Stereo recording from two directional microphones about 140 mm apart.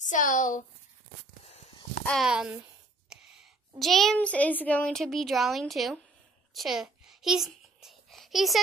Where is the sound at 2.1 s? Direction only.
Centre (ahead or behind).